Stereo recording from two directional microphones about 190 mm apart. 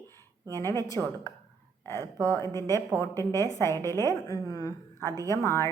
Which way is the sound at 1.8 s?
15° left (ahead or behind).